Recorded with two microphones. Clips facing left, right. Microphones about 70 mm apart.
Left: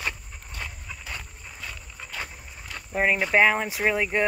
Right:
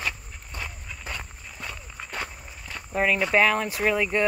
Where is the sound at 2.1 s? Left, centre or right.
Right.